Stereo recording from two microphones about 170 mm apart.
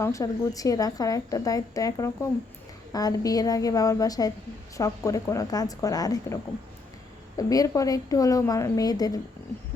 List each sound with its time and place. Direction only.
0.0 s a woman's voice: 20° left (ahead or behind)